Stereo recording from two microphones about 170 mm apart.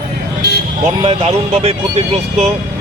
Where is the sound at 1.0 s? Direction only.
35° right (ahead or behind).